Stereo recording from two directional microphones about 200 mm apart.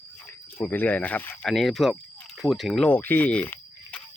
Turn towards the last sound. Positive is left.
turn(degrees=10)  # may be behind; listen again after turning